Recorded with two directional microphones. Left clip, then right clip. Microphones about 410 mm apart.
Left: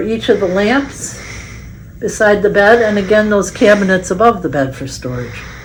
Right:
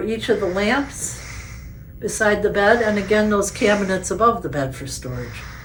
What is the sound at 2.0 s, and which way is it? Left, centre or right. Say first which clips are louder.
Speech: left 7 dB; left.